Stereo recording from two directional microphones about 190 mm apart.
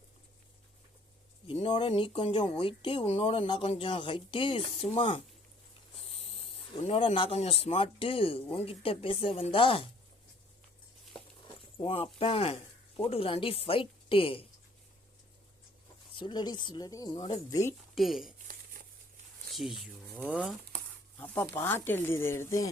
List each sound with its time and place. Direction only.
1.5 s speech: 25° left (ahead or behind)
11.4 s speech: 25° left (ahead or behind)
16.1 s speech: 25° left (ahead or behind)
17.9 s speech: centre (ahead or behind)
18.8 s crumpling: 45° right (ahead or behind)
19.5 s speech: centre (ahead or behind)
21.2 s speech: 10° left (ahead or behind)